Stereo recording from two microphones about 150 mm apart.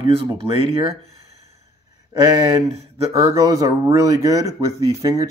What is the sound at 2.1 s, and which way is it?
Speech, 20° right (ahead or behind).